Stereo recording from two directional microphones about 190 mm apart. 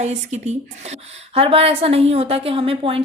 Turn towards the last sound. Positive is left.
turn(degrees=-30)  # may be behind; listen again after turning